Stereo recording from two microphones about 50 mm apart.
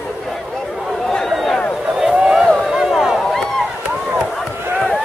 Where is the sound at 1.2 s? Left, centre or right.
Centre.